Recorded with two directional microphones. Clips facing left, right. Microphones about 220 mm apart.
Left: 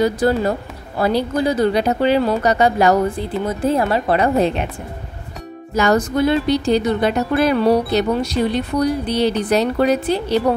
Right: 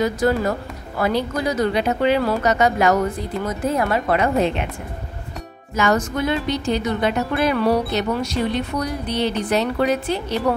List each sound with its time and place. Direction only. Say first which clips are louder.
0.0 s speech: left 3 dB; 30° left (ahead or behind)
5.8 s speech: left 4 dB; 35° left (ahead or behind)